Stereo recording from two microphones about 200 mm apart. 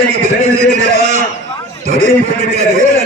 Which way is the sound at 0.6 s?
35° right (ahead or behind).